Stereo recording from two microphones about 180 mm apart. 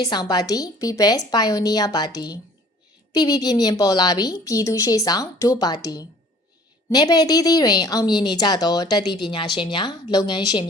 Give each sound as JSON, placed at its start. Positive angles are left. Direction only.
{"t": 0.0, "sound": "a woman's voice", "side_deg": 20}